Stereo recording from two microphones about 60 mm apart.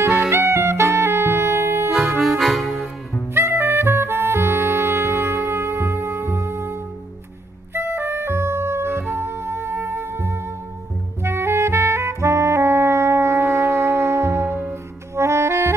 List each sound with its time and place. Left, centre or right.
0.1 s saxophone: right
2.0 s music: centre
3.3 s music: right
11.2 s saxophone: right